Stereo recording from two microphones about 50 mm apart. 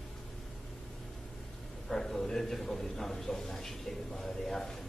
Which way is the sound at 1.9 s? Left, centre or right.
Centre.